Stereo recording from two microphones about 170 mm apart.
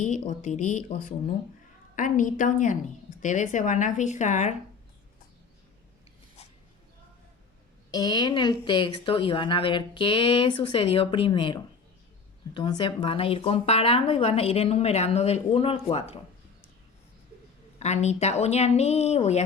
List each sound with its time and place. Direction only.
0.0 s speech: 45° left (ahead or behind)
7.9 s a woman's voice: 20° left (ahead or behind); by 16.1 s 35° left (ahead or behind)
17.7 s a woman's voice: 40° left (ahead or behind)